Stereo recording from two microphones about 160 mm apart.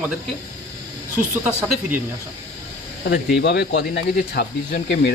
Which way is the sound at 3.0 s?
90° left.